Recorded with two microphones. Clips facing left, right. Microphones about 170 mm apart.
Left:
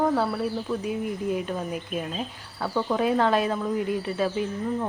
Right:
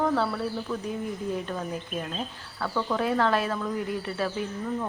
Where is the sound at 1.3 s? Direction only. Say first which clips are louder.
Left 3 dB; 15° left (ahead or behind).